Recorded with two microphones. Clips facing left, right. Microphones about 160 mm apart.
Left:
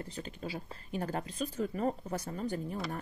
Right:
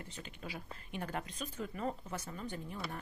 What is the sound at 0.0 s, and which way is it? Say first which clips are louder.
Speech: left 7 dB; 35° left (ahead or behind).